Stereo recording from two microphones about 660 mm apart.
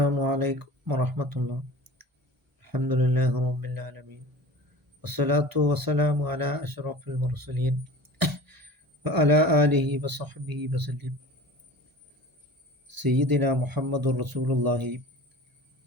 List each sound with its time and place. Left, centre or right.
0.0 s speech: right
2.6 s a man's voice: right
5.0 s a man's voice: right
12.9 s a man's voice: right